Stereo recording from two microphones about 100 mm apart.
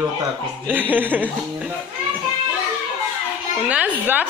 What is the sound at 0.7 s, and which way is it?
Speech, 20° right (ahead or behind).